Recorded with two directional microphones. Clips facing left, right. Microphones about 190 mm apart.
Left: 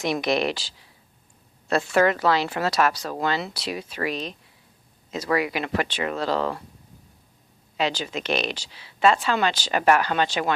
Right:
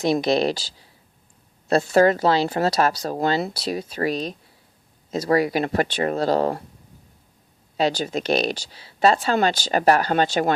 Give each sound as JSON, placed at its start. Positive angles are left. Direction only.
{"t": 0.0, "sound": "speech", "side_deg": -30}
{"t": 7.8, "sound": "speech", "side_deg": -40}